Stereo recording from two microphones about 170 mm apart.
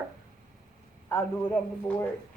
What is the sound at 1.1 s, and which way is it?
Speech, 10° left (ahead or behind).